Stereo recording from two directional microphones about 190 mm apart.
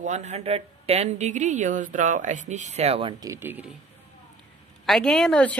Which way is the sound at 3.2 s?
15° right (ahead or behind).